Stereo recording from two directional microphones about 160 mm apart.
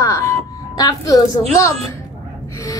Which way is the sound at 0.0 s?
20° left (ahead or behind).